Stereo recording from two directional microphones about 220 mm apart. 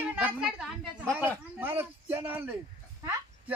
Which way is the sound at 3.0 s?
10° right (ahead or behind).